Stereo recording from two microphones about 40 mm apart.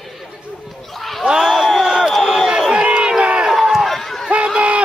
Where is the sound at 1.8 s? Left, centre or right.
Centre.